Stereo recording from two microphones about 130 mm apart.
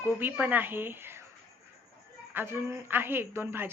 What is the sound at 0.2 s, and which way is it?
Speech, 15° right (ahead or behind).